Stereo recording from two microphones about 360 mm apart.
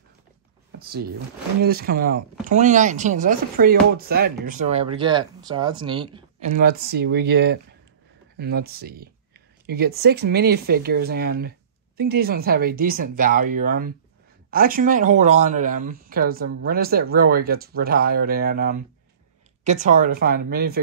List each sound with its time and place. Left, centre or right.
1.6 s speech: right